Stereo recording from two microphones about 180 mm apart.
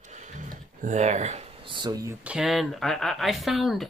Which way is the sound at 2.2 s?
5° right (ahead or behind).